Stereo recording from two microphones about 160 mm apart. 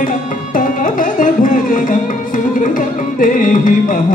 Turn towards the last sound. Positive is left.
turn(degrees=55)  # may be behind; listen again after turning